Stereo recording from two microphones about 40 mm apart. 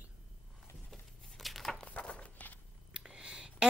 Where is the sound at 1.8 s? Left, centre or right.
Left.